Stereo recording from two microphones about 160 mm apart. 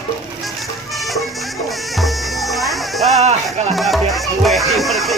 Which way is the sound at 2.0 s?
Centre (ahead or behind).